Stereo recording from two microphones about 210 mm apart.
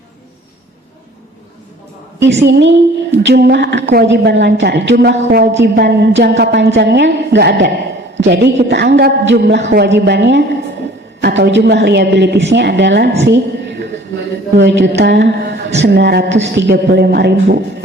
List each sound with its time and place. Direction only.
2.1 s a woman's voice: 55° right (ahead or behind)
13.2 s a sound: 55° right (ahead or behind)
14.6 s a woman's voice: 55° right (ahead or behind)